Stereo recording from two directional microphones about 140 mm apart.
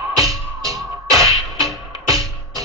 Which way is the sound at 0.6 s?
25° right (ahead or behind).